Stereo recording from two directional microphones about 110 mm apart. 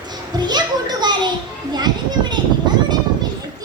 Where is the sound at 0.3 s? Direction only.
40° right (ahead or behind).